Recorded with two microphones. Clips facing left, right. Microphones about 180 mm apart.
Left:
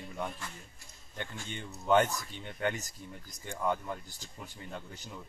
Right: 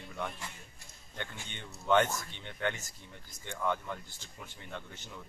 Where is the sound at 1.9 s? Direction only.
40° left (ahead or behind).